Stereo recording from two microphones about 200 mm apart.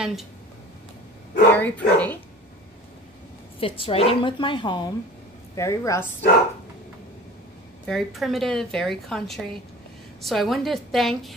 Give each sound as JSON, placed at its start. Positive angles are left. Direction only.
{"t": 0.0, "sound": "a woman's voice", "side_deg": 0}
{"t": 1.5, "sound": "speech", "side_deg": 10}
{"t": 3.5, "sound": "a woman's voice", "side_deg": 25}
{"t": 7.8, "sound": "a woman's voice", "side_deg": 0}